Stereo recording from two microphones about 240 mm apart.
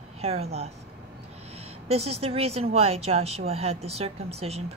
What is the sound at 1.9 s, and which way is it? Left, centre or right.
A woman's voice, right.